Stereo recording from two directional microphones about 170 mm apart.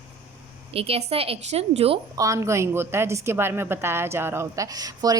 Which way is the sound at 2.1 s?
20° right (ahead or behind).